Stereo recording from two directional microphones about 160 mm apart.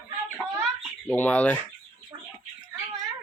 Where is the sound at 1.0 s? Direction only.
10° left (ahead or behind).